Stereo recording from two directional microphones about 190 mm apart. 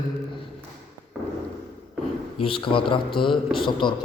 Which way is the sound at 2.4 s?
25° left (ahead or behind).